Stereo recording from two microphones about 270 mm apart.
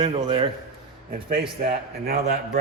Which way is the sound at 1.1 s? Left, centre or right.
Right.